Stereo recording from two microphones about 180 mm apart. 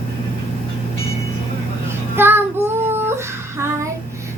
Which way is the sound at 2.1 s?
10° right (ahead or behind).